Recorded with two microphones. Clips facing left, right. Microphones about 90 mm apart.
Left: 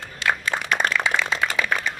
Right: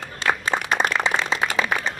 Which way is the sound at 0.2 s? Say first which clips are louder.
Right 1 dB; 35° right (ahead or behind).